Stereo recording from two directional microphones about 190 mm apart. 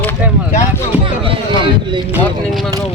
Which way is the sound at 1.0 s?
30° right (ahead or behind).